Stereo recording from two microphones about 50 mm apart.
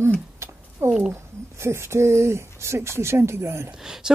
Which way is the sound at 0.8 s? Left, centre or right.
Right.